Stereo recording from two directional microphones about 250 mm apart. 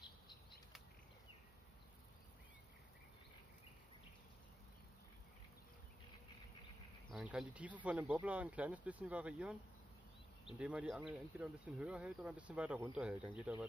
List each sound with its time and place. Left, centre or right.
0.0 s bird flight: centre
7.1 s speech: centre
10.6 s speech: centre